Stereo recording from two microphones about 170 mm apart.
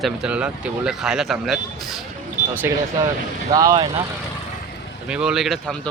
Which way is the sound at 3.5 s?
20° right (ahead or behind).